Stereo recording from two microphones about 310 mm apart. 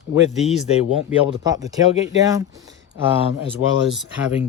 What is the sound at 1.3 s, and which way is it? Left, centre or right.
Speech, centre.